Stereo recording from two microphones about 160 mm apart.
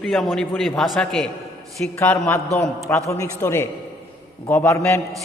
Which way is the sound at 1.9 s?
15° left (ahead or behind).